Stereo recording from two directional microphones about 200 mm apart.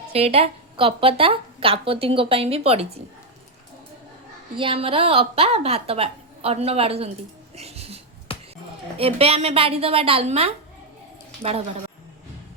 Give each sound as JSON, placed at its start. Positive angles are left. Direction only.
{"t": 0.1, "sound": "a woman's voice", "side_deg": -30}
{"t": 4.5, "sound": "a woman's voice", "side_deg": -25}
{"t": 7.5, "sound": "dog", "side_deg": -30}
{"t": 8.3, "sound": "a sound", "side_deg": 25}
{"t": 9.0, "sound": "a woman's voice", "side_deg": -30}